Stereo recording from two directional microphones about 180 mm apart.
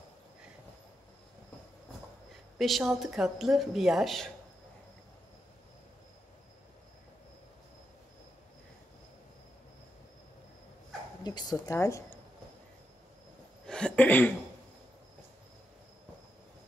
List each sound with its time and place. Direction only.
2.6 s a woman's voice: centre (ahead or behind)
11.2 s a sound: 25° left (ahead or behind)
11.6 s speech: 15° left (ahead or behind)
13.7 s cough: 5° left (ahead or behind)